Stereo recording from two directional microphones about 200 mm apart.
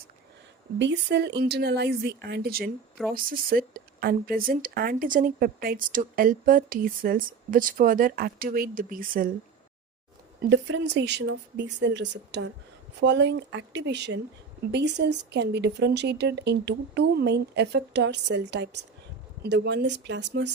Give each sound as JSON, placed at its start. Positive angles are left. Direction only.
{"t": 0.8, "sound": "speech", "side_deg": -60}
{"t": 10.4, "sound": "speech", "side_deg": -60}